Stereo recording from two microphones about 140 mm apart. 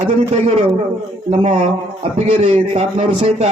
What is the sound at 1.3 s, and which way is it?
A man's voice, 50° right (ahead or behind).